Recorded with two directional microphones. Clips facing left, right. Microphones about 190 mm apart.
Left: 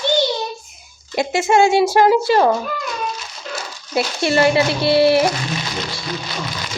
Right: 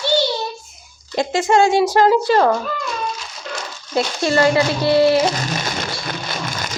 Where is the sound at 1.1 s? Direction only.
10° left (ahead or behind).